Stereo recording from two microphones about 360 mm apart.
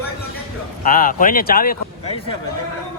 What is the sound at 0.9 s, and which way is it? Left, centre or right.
Speech, left.